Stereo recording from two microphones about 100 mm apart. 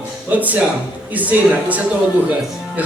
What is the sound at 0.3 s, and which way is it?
Speech, 15° right (ahead or behind).